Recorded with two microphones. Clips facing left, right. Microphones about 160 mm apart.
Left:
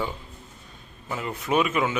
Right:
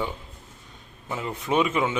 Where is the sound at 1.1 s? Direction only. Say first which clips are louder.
Even; 20° right (ahead or behind).